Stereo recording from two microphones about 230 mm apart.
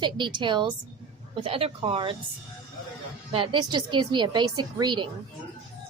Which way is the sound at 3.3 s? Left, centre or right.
Right.